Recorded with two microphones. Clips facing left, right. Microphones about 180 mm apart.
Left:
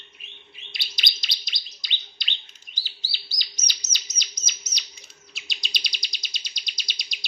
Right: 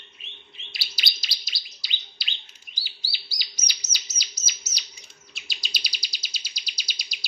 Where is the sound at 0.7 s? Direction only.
5° right (ahead or behind).